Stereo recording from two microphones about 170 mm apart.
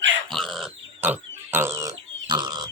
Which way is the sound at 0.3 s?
Centre (ahead or behind).